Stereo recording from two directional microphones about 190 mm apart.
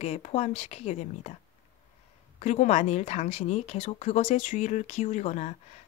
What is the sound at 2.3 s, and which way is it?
Speech, 40° left (ahead or behind).